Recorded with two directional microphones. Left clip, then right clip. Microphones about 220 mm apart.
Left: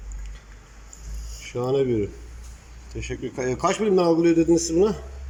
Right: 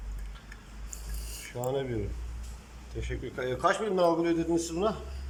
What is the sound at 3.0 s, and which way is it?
A man's voice, 15° left (ahead or behind).